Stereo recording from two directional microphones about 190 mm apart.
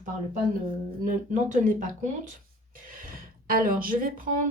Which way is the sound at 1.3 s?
40° right (ahead or behind).